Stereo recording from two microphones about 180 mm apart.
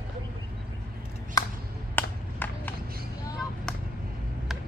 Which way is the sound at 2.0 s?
10° left (ahead or behind).